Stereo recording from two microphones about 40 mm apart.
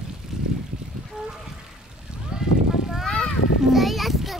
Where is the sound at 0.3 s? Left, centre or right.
Centre.